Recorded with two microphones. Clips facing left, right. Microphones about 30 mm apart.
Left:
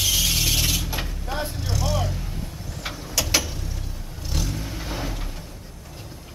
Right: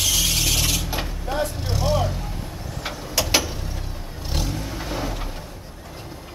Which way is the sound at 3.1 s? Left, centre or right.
Centre.